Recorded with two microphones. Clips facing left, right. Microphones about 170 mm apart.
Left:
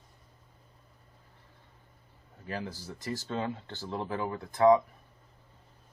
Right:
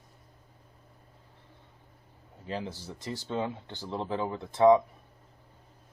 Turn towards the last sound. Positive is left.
turn(degrees=-20)  # may be behind; listen again after turning